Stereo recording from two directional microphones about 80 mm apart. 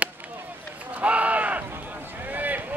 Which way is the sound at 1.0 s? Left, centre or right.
Centre.